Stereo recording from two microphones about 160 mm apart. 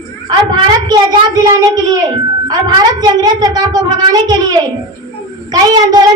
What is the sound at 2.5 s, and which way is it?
A woman's voice, 25° right (ahead or behind).